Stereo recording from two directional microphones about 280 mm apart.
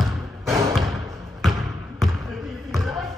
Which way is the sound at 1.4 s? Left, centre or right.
Centre.